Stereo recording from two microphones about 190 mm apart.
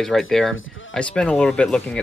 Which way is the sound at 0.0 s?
Centre (ahead or behind).